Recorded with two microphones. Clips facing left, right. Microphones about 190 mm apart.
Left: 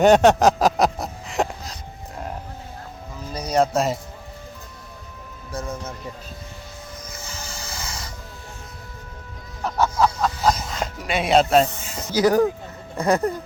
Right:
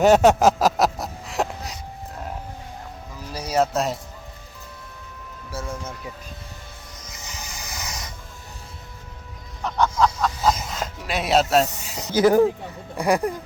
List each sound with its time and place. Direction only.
0.0 s a sound: 5° right (ahead or behind)
3.3 s speech: 5° right (ahead or behind)
5.5 s music: 5° right (ahead or behind)
7.1 s music: 20° right (ahead or behind)
9.6 s music: 5° left (ahead or behind)
11.9 s speech: 20° right (ahead or behind)
13.0 s speech: 15° right (ahead or behind)